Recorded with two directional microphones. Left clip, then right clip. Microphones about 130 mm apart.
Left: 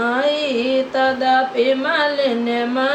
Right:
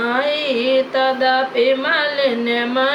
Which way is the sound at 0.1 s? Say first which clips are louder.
Even; 20° right (ahead or behind).